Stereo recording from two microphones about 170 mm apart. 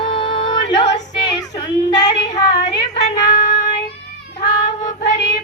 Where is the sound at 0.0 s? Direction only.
30° left (ahead or behind).